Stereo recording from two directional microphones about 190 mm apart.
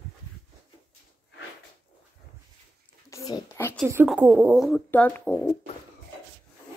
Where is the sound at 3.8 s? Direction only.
10° right (ahead or behind).